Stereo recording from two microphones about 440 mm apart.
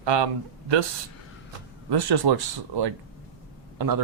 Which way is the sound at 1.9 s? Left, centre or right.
Right.